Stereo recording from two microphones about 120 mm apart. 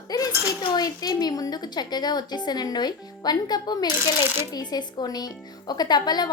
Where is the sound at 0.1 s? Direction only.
35° left (ahead or behind).